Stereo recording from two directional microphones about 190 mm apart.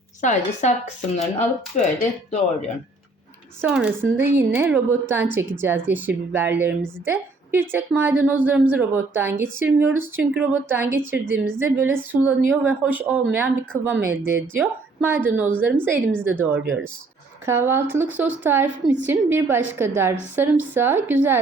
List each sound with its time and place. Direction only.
0.2 s speech: 40° left (ahead or behind)
3.6 s a woman's voice: 5° right (ahead or behind)